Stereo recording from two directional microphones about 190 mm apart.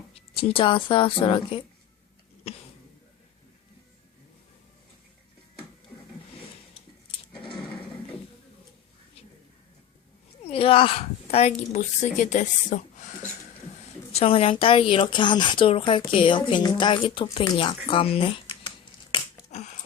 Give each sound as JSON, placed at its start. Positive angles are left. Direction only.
{"t": 0.1, "sound": "speech", "side_deg": 30}
{"t": 10.4, "sound": "a woman's voice", "side_deg": 30}
{"t": 14.1, "sound": "speech", "side_deg": 30}
{"t": 19.1, "sound": "a sound", "side_deg": 35}